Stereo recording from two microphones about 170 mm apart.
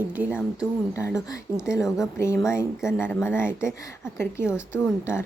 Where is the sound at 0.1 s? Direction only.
10° right (ahead or behind).